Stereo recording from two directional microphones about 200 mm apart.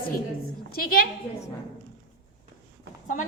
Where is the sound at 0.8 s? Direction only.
45° left (ahead or behind).